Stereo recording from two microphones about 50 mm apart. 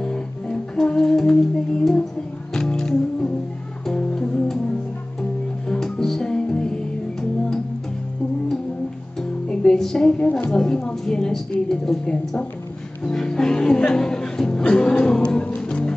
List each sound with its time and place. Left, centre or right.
0.0 s music: centre
5.7 s music: centre
9.5 s a sound: centre
10.5 s a woman's voice: centre
13.0 s music: centre